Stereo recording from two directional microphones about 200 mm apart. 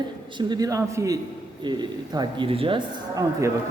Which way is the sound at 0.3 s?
20° right (ahead or behind).